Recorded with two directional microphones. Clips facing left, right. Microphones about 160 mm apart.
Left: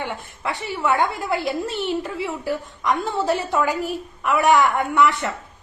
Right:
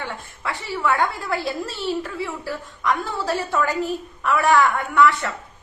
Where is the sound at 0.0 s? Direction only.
20° left (ahead or behind).